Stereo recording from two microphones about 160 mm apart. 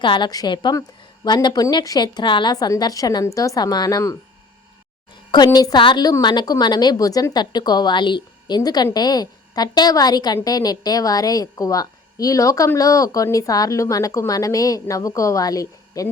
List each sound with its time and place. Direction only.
0.0 s a woman's voice: 30° left (ahead or behind)
5.3 s a woman's voice: 25° left (ahead or behind)